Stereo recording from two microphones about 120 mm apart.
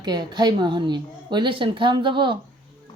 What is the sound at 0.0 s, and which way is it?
Speech, 35° right (ahead or behind).